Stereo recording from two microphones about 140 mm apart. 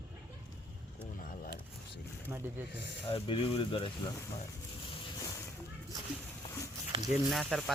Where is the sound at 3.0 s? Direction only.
40° left (ahead or behind).